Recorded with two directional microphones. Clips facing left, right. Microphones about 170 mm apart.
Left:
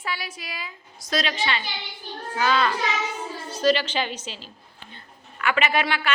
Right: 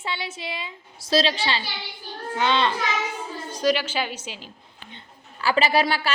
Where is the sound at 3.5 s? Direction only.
10° right (ahead or behind).